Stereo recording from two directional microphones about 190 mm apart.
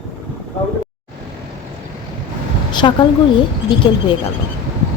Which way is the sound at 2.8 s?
25° left (ahead or behind).